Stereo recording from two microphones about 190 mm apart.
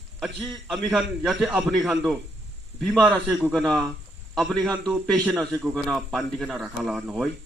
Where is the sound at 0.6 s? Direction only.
5° right (ahead or behind).